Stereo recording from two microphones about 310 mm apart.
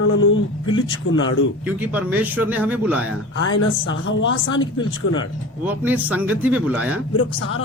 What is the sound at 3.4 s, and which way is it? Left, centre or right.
Speech, left.